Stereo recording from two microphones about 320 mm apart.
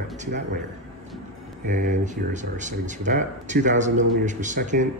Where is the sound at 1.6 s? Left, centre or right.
Right.